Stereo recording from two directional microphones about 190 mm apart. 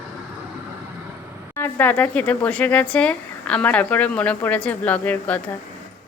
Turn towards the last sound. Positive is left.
turn(degrees=10)  # may be behind; listen again after turning